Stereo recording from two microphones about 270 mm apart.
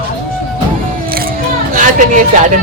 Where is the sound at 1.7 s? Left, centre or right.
Right.